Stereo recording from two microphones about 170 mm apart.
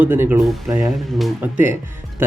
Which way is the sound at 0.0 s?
10° right (ahead or behind).